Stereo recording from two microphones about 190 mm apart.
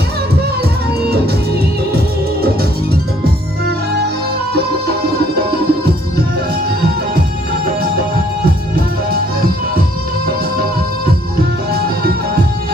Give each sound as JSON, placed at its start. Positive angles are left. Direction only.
{"t": 4.5, "sound": "music", "side_deg": -55}